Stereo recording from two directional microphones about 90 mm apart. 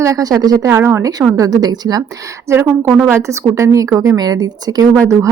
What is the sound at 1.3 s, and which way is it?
Speech, 40° right (ahead or behind).